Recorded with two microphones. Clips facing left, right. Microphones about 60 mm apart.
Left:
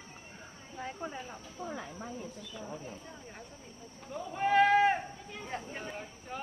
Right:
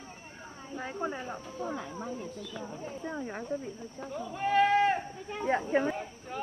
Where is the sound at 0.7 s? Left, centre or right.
Right.